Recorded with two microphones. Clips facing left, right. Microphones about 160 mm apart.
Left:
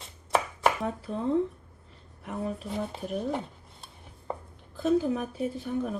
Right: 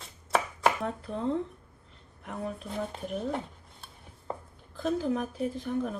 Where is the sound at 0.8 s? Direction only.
5° left (ahead or behind).